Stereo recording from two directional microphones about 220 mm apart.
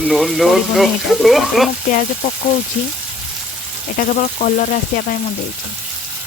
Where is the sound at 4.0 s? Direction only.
40° left (ahead or behind).